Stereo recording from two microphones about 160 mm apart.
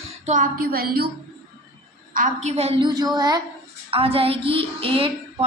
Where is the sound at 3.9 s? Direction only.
35° right (ahead or behind).